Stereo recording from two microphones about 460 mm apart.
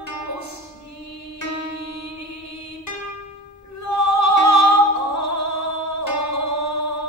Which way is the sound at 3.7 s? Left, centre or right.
Left.